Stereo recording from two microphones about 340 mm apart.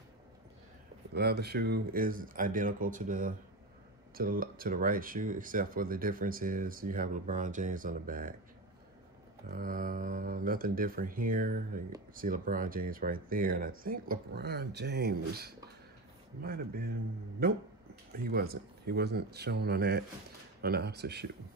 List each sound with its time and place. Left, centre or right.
1.1 s speech: right
9.5 s speech: right
18.2 s speech: right